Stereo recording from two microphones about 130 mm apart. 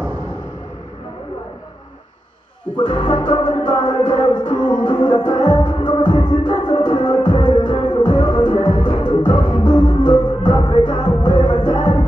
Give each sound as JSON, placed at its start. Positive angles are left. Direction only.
{"t": 2.7, "sound": "music", "side_deg": 35}